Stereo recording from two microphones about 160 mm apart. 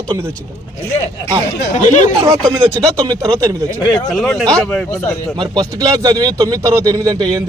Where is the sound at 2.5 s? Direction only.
20° right (ahead or behind).